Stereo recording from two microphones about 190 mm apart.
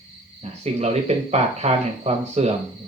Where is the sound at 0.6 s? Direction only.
35° right (ahead or behind).